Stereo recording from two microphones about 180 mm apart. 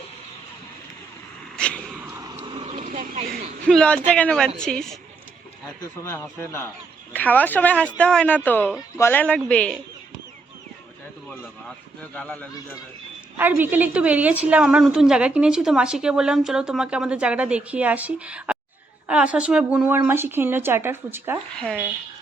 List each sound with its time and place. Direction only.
1.5 s a sound: 5° left (ahead or behind)
2.3 s vehicle: 30° right (ahead or behind)
2.7 s vehicle: 45° right (ahead or behind)
3.7 s a woman's voice: 5° left (ahead or behind)
6.4 s speech: 10° left (ahead or behind)
12.1 s speech: 5° left (ahead or behind)
13.3 s a woman's voice: 10° right (ahead or behind)
21.5 s a woman's voice: 5° left (ahead or behind)